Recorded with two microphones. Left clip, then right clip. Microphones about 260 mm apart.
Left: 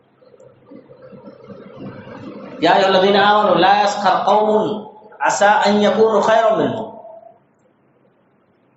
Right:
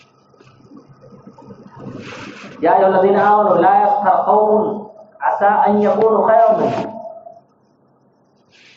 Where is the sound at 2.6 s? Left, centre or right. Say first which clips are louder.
Right 1 dB; left.